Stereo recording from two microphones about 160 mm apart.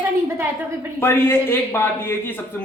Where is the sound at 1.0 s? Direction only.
15° left (ahead or behind).